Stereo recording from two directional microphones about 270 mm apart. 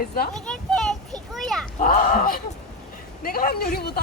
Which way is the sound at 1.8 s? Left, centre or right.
Left.